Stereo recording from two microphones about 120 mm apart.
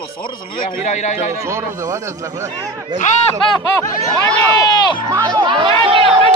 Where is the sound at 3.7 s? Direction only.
20° left (ahead or behind).